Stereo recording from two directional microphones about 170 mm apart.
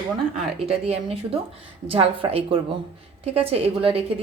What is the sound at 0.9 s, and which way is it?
A woman's voice, 35° right (ahead or behind).